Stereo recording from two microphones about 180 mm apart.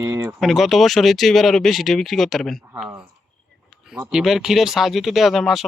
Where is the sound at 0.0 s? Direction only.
15° right (ahead or behind).